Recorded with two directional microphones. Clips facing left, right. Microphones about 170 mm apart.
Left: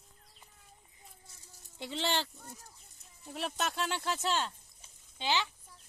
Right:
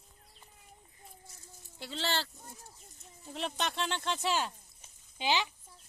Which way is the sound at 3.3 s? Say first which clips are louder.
Even; 5° left (ahead or behind).